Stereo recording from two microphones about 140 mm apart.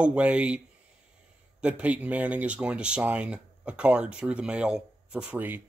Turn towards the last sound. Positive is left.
turn(degrees=-15)  # may be behind; listen again after turning